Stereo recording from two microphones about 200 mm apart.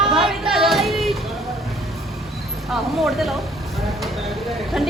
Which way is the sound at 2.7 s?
Centre (ahead or behind).